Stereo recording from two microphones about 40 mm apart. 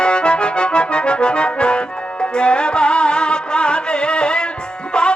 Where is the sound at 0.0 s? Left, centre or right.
Left.